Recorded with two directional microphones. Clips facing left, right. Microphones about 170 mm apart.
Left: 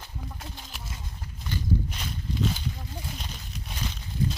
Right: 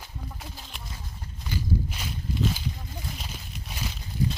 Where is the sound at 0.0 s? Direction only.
Centre (ahead or behind).